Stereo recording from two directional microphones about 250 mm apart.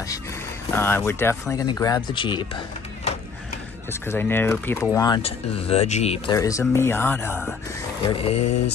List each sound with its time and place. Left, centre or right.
0.7 s speech: centre
4.1 s speech: centre
8.1 s speech: left